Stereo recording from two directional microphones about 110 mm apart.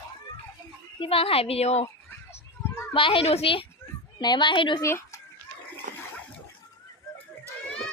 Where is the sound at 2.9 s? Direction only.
50° left (ahead or behind).